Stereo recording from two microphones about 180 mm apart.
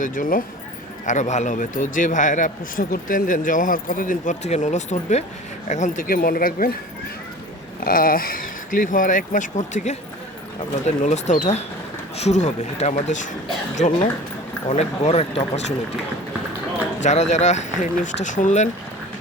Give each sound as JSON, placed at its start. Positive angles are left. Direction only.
{"t": 0.0, "sound": "a man's voice", "side_deg": 45}
{"t": 7.8, "sound": "a man's voice", "side_deg": 50}
{"t": 17.0, "sound": "speech", "side_deg": 40}